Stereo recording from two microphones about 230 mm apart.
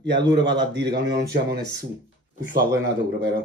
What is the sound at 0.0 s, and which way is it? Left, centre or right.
Speech, right.